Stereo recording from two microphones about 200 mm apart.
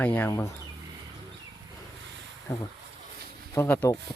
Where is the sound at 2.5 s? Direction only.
15° left (ahead or behind).